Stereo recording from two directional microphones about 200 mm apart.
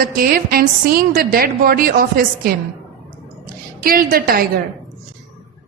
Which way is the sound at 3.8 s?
45° right (ahead or behind).